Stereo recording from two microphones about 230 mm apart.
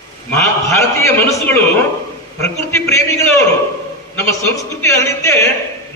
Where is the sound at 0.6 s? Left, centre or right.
Centre.